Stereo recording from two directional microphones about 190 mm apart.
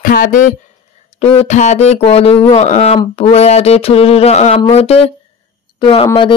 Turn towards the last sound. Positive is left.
turn(degrees=30)  # may be behind; listen again after turning